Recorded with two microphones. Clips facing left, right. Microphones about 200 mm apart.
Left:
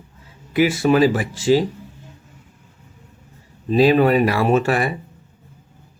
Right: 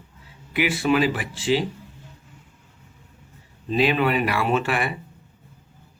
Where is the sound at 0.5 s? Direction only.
40° left (ahead or behind).